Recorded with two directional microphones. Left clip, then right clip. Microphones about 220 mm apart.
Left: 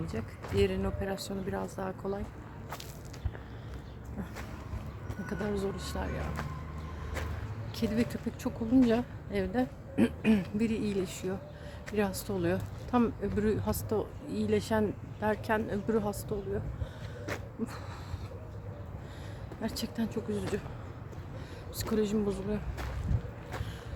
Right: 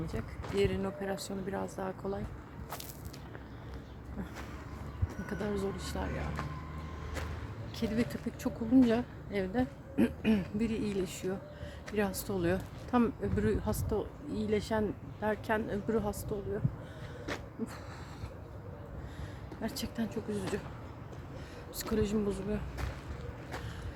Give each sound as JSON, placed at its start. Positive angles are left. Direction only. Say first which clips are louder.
{"t": 0.0, "sound": "speech", "louder": "left 1 dB", "side_deg": 5}
{"t": 5.2, "sound": "speech", "louder": "left 2 dB", "side_deg": 0}
{"t": 7.8, "sound": "speech", "louder": "left 2 dB", "side_deg": 5}
{"t": 17.3, "sound": "a sound", "louder": "left 1 dB", "side_deg": 10}
{"t": 19.6, "sound": "speech", "louder": "left 2 dB", "side_deg": 5}
{"t": 21.8, "sound": "speech", "louder": "left 2 dB", "side_deg": 0}